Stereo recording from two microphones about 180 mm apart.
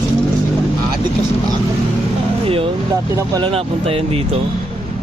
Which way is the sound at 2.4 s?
30° right (ahead or behind).